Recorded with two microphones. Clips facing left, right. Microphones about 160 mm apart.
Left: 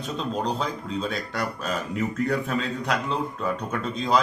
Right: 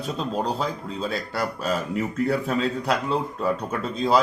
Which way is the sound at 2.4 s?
35° right (ahead or behind).